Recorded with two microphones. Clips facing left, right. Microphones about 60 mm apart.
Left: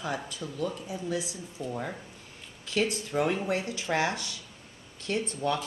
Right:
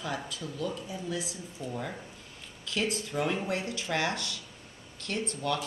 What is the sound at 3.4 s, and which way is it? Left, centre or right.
A woman's voice, centre.